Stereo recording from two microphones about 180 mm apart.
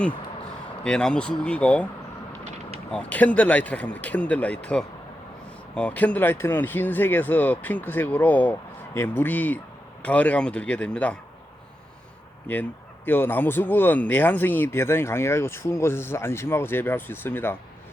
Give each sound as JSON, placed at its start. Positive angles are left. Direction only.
{"t": 0.9, "sound": "speech", "side_deg": 5}
{"t": 2.4, "sound": "a sound", "side_deg": -35}
{"t": 2.9, "sound": "speech", "side_deg": 10}
{"t": 12.5, "sound": "speech", "side_deg": 10}